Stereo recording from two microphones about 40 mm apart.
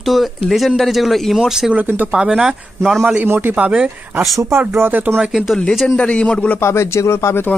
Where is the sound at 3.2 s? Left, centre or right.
Right.